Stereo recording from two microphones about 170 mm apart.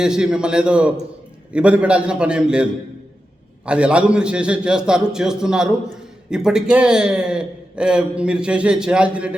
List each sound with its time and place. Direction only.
0.0 s a man's voice: 5° right (ahead or behind)
3.7 s a man's voice: 5° right (ahead or behind)